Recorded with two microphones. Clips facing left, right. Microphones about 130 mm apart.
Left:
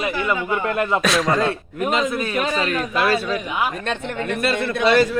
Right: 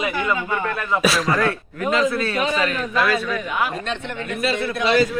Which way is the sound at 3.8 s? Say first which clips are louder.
Left 2 dB; 50° left (ahead or behind).